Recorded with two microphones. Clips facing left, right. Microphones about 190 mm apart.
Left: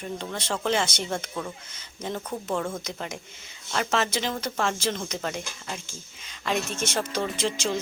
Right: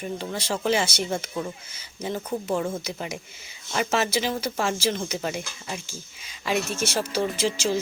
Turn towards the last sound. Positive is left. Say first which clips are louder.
# right 3 dB
turn(degrees=-5)  # may be behind; listen again after turning